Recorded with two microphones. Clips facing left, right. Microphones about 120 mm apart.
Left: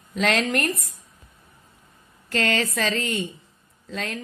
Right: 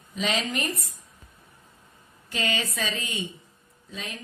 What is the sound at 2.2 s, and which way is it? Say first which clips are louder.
Speech: left 6 dB; 90° left.